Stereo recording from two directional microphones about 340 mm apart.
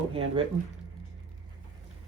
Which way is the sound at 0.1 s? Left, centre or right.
Centre.